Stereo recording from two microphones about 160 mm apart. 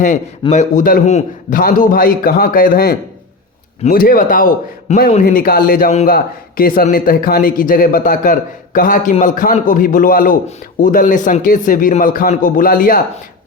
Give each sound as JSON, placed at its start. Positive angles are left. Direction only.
{"t": 0.5, "sound": "a man's voice", "side_deg": 50}
{"t": 1.0, "sound": "a man's voice", "side_deg": 50}
{"t": 3.9, "sound": "a man's voice", "side_deg": 60}